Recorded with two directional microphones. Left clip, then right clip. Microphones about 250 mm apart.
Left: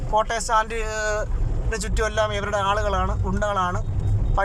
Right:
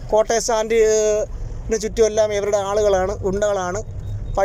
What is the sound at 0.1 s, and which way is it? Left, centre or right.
Speech, centre.